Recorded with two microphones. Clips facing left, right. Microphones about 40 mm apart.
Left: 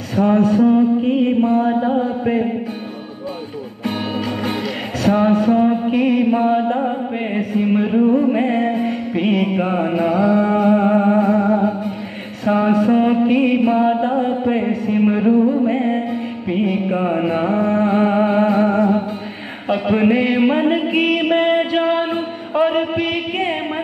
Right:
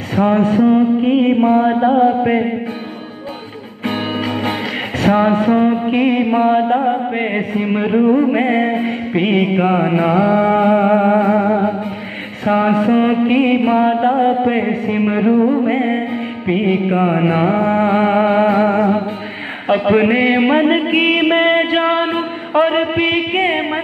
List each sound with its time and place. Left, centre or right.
0.1 s mantra: right
3.8 s music: right
12.4 s mantra: right
19.7 s music: right